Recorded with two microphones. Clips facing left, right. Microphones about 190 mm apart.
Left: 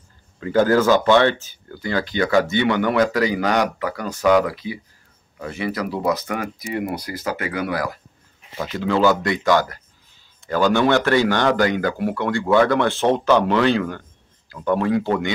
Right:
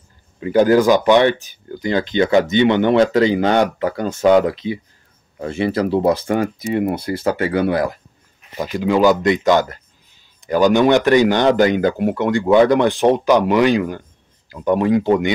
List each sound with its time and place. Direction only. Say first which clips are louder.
0.4 s speech: right 4 dB; 15° right (ahead or behind)
8.5 s speech: right 4 dB; 15° right (ahead or behind)